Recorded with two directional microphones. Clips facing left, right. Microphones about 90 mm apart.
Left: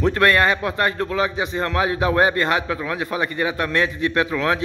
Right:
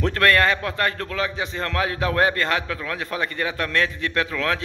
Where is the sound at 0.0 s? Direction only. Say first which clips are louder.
Left 2 dB; 15° left (ahead or behind).